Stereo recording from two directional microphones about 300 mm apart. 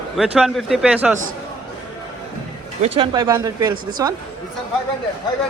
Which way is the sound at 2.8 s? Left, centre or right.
Centre.